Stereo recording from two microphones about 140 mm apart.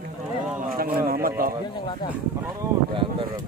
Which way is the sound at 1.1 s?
90° right.